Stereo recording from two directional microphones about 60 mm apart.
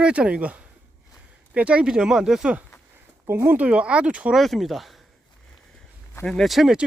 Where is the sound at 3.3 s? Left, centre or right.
Right.